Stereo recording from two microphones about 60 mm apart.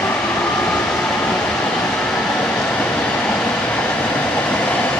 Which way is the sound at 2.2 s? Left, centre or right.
Centre.